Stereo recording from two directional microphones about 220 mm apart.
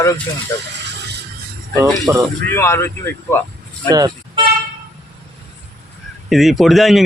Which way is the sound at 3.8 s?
15° right (ahead or behind).